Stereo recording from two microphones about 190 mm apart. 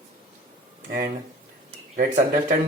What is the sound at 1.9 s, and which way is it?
Speech, 45° right (ahead or behind).